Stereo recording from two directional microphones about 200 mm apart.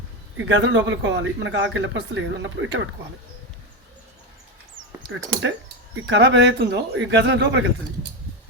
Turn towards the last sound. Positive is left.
turn(degrees=-60)  # may be behind; listen again after turning